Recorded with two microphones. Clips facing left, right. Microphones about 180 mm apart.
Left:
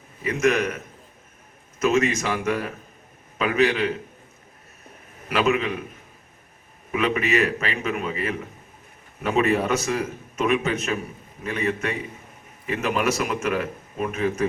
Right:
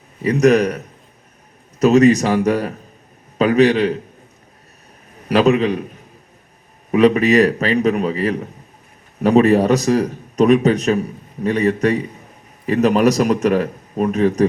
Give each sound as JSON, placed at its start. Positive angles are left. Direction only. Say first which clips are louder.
{"t": 0.2, "sound": "a man's voice", "louder": "right 8 dB", "side_deg": -35}
{"t": 1.8, "sound": "a man's voice", "louder": "right 10 dB", "side_deg": -40}
{"t": 5.3, "sound": "a man's voice", "louder": "right 8 dB", "side_deg": -35}
{"t": 6.9, "sound": "a man's voice", "louder": "right 10 dB", "side_deg": -35}